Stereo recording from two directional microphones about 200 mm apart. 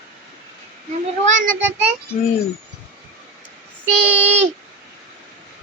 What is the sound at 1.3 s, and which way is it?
Speech, 40° right (ahead or behind).